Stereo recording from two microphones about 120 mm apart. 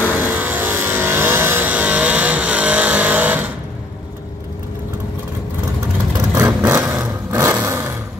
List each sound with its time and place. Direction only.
0.2 s vehicle: 15° right (ahead or behind)
6.1 s vehicle: 30° right (ahead or behind)
6.6 s vehicle: 15° right (ahead or behind)